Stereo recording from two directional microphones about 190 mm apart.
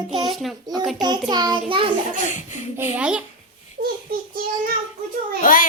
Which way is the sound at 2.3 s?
40° left (ahead or behind).